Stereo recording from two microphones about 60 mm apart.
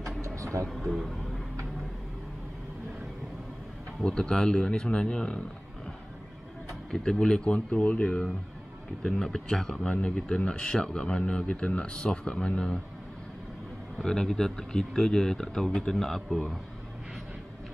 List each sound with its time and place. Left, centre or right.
0.4 s a sound: right
0.7 s speech: centre
4.0 s speech: centre
6.9 s speech: centre
14.0 s speech: centre